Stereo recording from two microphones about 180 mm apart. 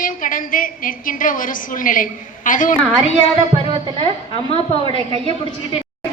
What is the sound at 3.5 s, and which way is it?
A woman's voice, 30° right (ahead or behind).